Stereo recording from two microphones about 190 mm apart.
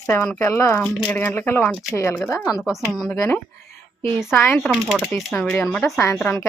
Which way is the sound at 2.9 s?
Centre (ahead or behind).